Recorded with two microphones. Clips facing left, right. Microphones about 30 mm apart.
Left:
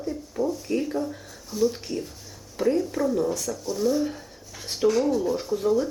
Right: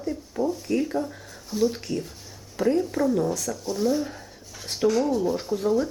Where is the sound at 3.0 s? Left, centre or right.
Right.